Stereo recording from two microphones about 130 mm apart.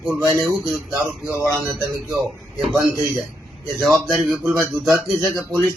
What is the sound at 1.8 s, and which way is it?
Speech, 25° right (ahead or behind).